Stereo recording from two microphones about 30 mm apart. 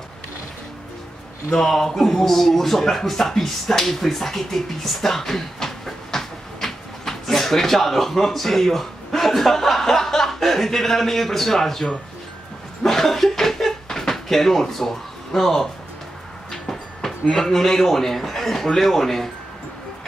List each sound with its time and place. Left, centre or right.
1.5 s speech: centre
12.8 s chuckle: centre
13.8 s cupboard open or close: centre
14.1 s speech: centre
16.6 s speech: centre